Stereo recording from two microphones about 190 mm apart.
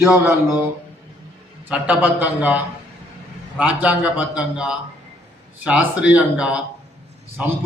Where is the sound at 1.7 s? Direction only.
5° right (ahead or behind).